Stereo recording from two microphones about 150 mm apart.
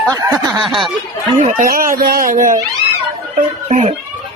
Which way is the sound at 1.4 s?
65° right (ahead or behind).